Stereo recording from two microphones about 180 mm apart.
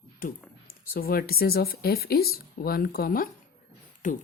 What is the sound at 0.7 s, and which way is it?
Speech, 55° left (ahead or behind).